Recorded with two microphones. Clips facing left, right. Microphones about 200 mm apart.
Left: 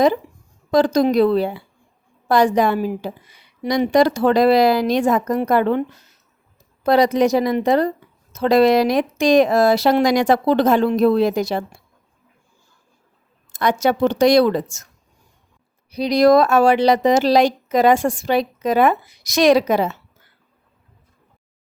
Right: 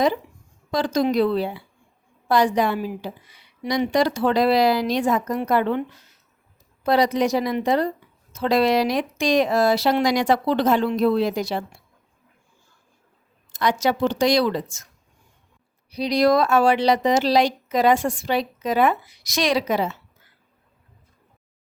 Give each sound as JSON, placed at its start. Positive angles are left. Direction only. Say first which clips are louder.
{"t": 0.7, "sound": "speech", "louder": "left 6 dB", "side_deg": 45}
{"t": 6.8, "sound": "speech", "louder": "left 4 dB", "side_deg": 50}
{"t": 13.5, "sound": "speech", "louder": "left 3 dB", "side_deg": 55}
{"t": 15.9, "sound": "speech", "louder": "left 5 dB", "side_deg": 50}